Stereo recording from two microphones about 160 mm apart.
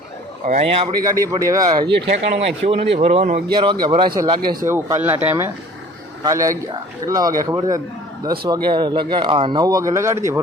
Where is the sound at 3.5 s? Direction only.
30° right (ahead or behind).